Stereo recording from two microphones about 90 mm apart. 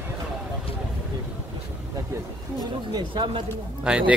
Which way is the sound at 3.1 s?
70° right (ahead or behind).